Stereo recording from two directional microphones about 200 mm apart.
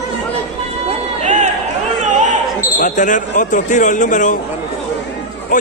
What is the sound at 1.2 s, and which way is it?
Run, 35° right (ahead or behind).